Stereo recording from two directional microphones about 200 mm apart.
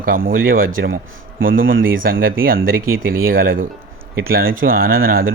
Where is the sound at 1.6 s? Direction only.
75° right (ahead or behind).